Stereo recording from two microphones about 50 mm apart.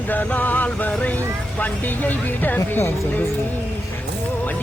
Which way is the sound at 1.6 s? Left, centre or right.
Left.